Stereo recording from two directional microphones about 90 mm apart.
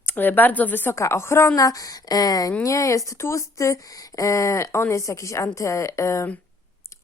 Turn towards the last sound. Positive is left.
turn(degrees=35)  # may be behind; listen again after turning